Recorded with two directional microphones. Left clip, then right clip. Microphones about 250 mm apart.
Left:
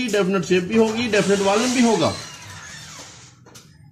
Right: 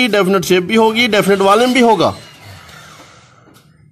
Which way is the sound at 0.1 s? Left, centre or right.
Right.